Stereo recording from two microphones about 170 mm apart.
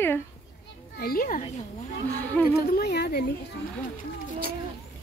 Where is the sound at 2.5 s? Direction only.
75° left (ahead or behind).